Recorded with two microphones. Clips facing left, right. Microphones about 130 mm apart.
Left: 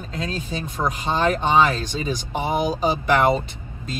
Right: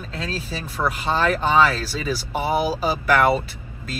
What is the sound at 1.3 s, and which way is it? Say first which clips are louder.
Speech: even; 20° left (ahead or behind).